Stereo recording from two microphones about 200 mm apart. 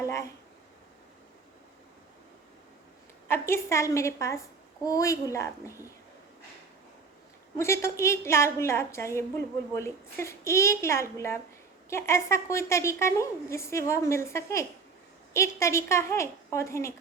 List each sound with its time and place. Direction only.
0.0 s speech: 15° left (ahead or behind)
3.2 s a woman's voice: 15° left (ahead or behind)
7.6 s a woman's voice: 15° left (ahead or behind)